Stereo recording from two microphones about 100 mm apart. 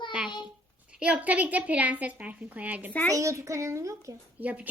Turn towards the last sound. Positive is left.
turn(degrees=-15)  # may be behind; listen again after turning